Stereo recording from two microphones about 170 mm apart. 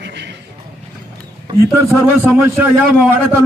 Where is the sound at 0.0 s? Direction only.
90° right.